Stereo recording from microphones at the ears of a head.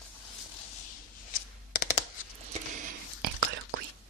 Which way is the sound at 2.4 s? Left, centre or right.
Right.